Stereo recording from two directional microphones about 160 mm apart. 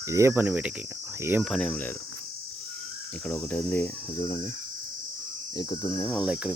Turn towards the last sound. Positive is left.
turn(degrees=-5)  # may be behind; listen again after turning